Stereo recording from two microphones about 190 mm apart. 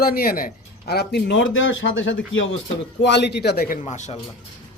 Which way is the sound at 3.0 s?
65° left (ahead or behind).